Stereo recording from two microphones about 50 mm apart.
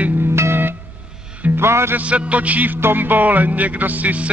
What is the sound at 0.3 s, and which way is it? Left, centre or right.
Music, right.